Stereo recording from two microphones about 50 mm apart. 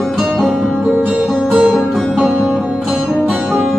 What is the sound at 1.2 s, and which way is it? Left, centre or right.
Music, centre.